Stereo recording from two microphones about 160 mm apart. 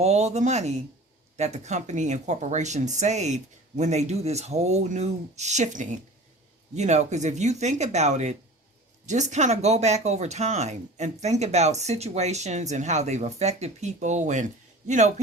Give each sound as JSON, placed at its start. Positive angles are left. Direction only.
{"t": 0.0, "sound": "speech", "side_deg": -45}